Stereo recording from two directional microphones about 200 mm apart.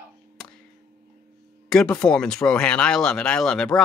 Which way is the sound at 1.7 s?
5° left (ahead or behind).